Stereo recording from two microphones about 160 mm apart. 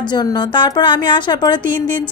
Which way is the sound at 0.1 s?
25° left (ahead or behind).